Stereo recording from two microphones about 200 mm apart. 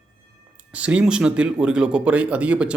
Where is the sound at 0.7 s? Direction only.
5° right (ahead or behind).